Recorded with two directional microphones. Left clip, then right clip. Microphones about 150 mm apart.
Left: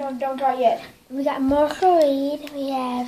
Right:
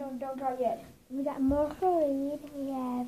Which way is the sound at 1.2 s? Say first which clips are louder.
Left 10 dB; 20° left (ahead or behind).